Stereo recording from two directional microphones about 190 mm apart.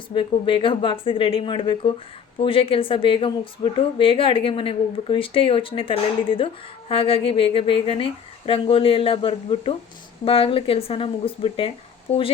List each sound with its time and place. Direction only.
0.1 s a woman's voice: 25° left (ahead or behind)